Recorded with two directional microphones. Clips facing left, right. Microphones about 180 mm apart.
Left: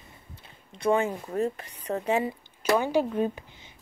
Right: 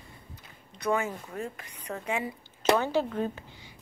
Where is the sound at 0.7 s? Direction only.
30° left (ahead or behind).